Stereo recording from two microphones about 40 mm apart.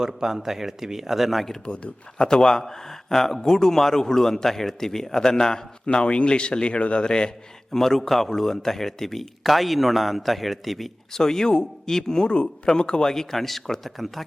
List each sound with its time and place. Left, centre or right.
0.1 s speech: centre
1.6 s speech: left
2.1 s a man's voice: centre
5.8 s speech: left
7.7 s speech: centre
11.1 s a man's voice: centre